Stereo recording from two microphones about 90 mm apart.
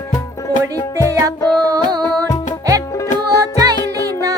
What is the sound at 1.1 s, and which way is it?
Music, 35° right (ahead or behind).